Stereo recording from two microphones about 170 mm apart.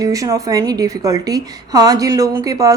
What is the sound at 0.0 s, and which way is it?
A woman's voice, 20° right (ahead or behind).